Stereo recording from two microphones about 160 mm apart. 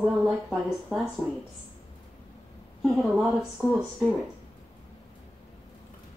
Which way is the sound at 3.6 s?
Centre (ahead or behind).